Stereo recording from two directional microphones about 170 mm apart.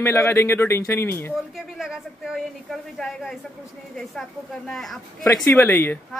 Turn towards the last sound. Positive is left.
turn(degrees=15)  # may be behind; listen again after turning